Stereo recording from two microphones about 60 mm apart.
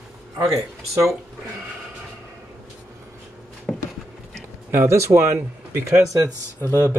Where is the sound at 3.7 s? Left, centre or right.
Centre.